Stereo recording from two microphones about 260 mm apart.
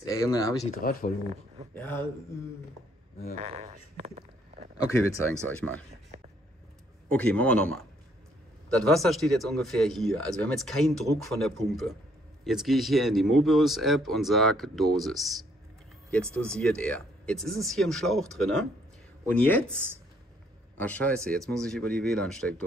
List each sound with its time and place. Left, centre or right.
0.0 s speech: centre
0.7 s speech: left
1.8 s speech: centre
3.3 s speech: right
4.7 s speech: centre
7.1 s speech: centre
20.7 s speech: centre